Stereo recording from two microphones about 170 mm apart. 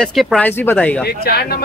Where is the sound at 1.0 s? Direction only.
65° left (ahead or behind).